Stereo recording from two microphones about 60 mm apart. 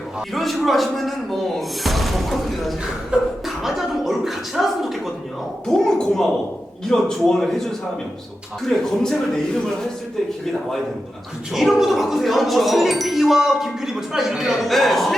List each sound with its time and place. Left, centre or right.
0.3 s speech: centre
5.6 s a woman's voice: centre
11.5 s speech: centre